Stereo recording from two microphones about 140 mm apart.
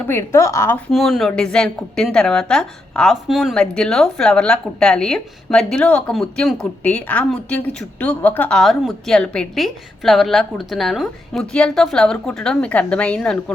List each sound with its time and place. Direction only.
0.1 s a woman's voice: 20° left (ahead or behind)
0.9 s a woman's voice: centre (ahead or behind)